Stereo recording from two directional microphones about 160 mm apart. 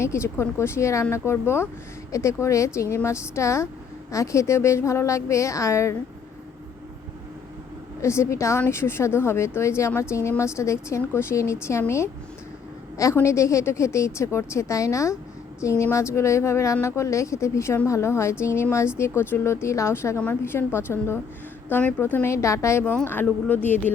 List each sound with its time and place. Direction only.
0.0 s a woman's voice: 15° left (ahead or behind)
8.0 s a woman's voice: 15° left (ahead or behind)